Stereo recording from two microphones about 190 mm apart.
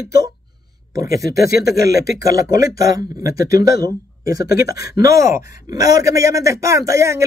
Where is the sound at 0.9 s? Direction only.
15° right (ahead or behind).